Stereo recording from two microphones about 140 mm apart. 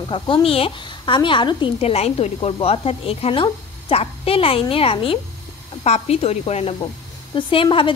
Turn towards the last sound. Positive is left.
turn(degrees=40)  # may be behind; listen again after turning